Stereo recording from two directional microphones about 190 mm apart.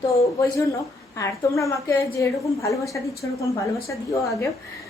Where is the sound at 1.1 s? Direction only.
15° left (ahead or behind).